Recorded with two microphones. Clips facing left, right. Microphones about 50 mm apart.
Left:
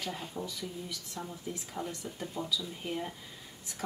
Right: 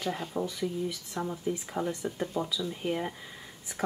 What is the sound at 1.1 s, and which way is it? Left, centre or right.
Speech, right.